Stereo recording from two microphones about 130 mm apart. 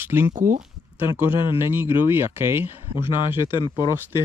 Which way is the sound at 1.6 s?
20° right (ahead or behind).